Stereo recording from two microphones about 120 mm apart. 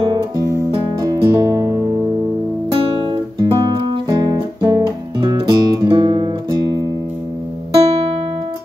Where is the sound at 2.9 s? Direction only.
40° right (ahead or behind).